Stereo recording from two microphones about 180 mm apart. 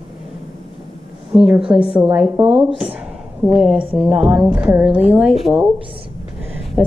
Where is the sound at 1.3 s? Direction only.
5° right (ahead or behind).